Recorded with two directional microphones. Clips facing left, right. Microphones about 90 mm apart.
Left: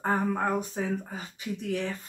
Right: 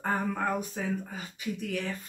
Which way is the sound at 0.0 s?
30° left (ahead or behind).